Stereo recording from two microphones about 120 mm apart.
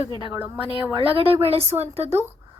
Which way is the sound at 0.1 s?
40° left (ahead or behind).